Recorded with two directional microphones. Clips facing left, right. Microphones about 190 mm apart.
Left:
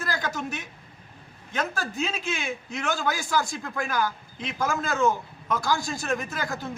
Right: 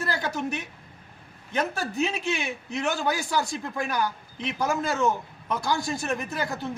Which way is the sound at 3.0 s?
20° right (ahead or behind).